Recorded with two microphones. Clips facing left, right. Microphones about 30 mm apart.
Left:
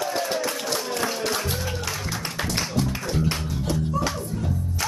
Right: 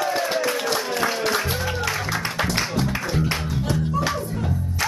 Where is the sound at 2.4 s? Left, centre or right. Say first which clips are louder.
Right 1 dB; centre.